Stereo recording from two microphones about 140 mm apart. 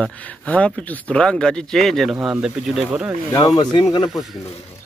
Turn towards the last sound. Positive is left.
turn(degrees=30)  # may be behind; listen again after turning